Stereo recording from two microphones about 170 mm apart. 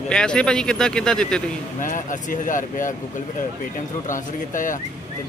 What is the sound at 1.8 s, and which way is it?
Speech, 50° left (ahead or behind).